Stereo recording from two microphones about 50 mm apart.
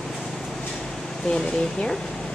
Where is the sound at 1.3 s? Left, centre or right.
Centre.